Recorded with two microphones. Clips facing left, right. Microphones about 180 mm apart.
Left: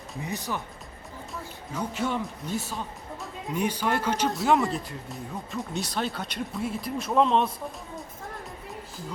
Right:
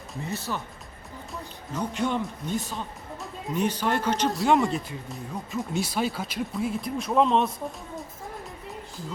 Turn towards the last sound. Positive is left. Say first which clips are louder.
# right 1 dB
turn(degrees=0)  # may be behind; listen again after turning